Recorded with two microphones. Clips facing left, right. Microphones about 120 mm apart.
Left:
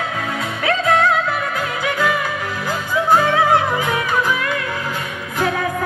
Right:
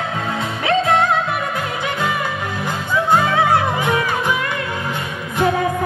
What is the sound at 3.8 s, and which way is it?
Music, 25° right (ahead or behind).